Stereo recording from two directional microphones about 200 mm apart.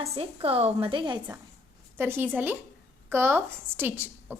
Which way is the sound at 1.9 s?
10° right (ahead or behind).